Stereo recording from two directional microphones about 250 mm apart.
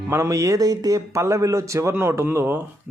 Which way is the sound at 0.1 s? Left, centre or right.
Centre.